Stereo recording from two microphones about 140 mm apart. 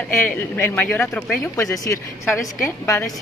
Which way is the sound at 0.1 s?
15° left (ahead or behind).